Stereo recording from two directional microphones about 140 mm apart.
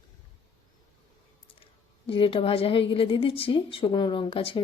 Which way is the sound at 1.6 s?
40° left (ahead or behind).